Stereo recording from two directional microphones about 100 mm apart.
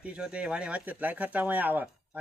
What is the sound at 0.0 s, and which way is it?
Speech, 10° right (ahead or behind).